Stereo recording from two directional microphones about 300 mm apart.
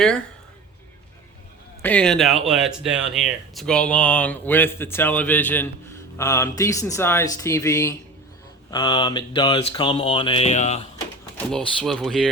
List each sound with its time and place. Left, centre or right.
1.8 s speech: centre; by 10.8 s left
11.3 s speech: centre